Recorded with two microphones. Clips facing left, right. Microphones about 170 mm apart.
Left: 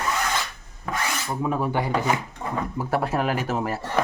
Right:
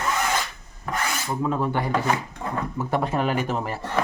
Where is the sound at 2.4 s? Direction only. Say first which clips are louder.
Even; 5° left (ahead or behind).